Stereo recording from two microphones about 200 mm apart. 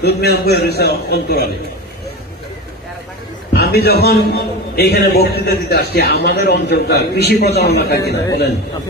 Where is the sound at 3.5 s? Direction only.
55° left (ahead or behind).